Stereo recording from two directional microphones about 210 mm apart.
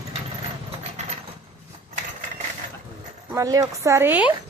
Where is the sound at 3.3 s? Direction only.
15° right (ahead or behind).